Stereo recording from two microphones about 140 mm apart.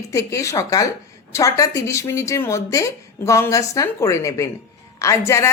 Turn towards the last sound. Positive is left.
turn(degrees=20)  # may be behind; listen again after turning